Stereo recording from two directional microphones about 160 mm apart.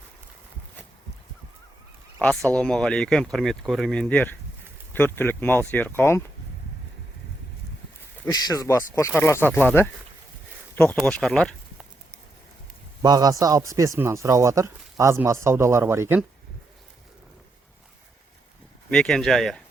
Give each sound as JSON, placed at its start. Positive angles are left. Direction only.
{"t": 2.2, "sound": "speech", "side_deg": 5}
{"t": 8.3, "sound": "speech", "side_deg": 20}
{"t": 13.0, "sound": "speech", "side_deg": -25}
{"t": 18.9, "sound": "speech", "side_deg": 5}